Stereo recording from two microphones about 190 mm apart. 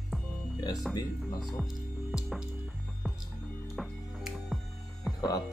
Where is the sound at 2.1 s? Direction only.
5° right (ahead or behind).